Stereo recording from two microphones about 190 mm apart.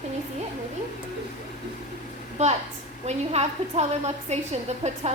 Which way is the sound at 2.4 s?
35° right (ahead or behind).